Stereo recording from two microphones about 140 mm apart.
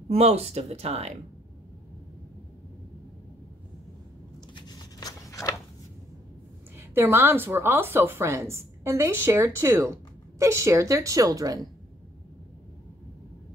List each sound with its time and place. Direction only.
0.1 s speech: 45° right (ahead or behind)
4.6 s a sound: 30° left (ahead or behind)
6.9 s a woman's voice: 15° right (ahead or behind)